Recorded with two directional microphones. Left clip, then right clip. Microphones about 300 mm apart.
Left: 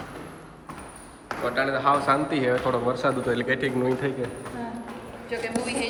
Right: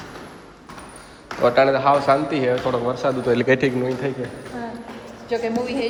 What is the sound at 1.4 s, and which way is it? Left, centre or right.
A man's voice, centre.